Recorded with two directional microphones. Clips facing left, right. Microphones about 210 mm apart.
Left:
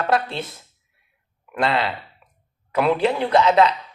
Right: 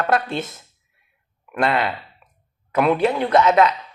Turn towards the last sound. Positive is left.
turn(degrees=30)  # may be behind; listen again after turning